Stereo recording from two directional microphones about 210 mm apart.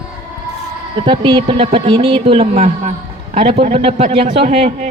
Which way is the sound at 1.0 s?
25° right (ahead or behind).